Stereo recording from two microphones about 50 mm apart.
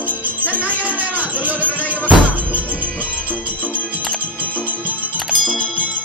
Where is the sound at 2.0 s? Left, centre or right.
Right.